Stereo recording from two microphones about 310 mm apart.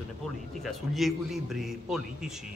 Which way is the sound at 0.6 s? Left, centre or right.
Centre.